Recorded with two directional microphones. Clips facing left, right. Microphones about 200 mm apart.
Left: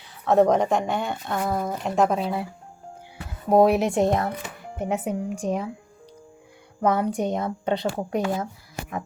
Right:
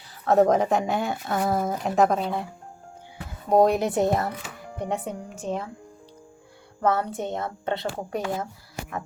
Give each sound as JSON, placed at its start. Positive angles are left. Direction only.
{"t": 0.3, "sound": "speech", "side_deg": 0}
{"t": 3.5, "sound": "a woman's voice", "side_deg": 5}
{"t": 6.8, "sound": "a woman's voice", "side_deg": 15}